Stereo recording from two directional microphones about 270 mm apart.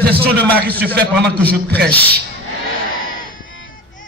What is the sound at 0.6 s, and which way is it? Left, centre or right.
Speech, right.